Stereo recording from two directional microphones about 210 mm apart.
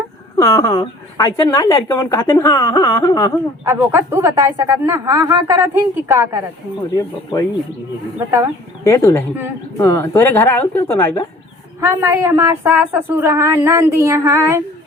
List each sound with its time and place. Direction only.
0.3 s a woman's voice: 15° left (ahead or behind)
3.7 s speech: 10° right (ahead or behind)
6.9 s a woman's voice: 15° left (ahead or behind)
8.8 s a woman's voice: 10° left (ahead or behind)
11.8 s speech: 15° right (ahead or behind)